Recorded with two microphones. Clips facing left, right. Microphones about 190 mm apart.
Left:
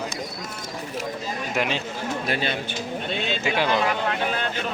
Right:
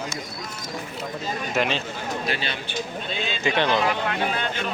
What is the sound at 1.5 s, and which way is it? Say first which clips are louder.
Speech: right 1 dB; 10° left (ahead or behind).